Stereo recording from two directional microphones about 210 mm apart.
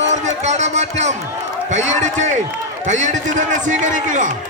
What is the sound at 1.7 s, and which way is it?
A man's voice, 35° right (ahead or behind).